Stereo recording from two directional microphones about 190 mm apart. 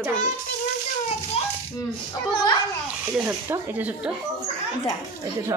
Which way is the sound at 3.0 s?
10° right (ahead or behind).